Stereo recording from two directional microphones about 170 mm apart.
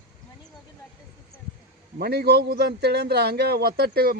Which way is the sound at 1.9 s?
65° right (ahead or behind).